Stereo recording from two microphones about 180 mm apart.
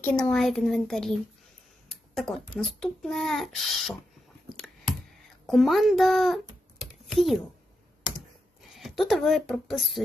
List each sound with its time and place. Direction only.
0.0 s a child's voice: 5° left (ahead or behind)
2.6 s a child's voice: centre (ahead or behind)
4.5 s clicking: centre (ahead or behind)
5.5 s a child's voice: centre (ahead or behind)
8.7 s speech: centre (ahead or behind)